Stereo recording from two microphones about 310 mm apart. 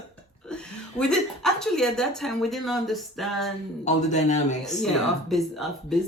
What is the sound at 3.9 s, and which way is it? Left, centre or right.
Speech, left.